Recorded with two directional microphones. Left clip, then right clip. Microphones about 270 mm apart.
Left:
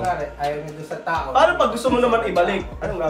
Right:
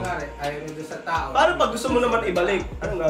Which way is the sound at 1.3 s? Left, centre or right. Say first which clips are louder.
Left 3 dB; centre.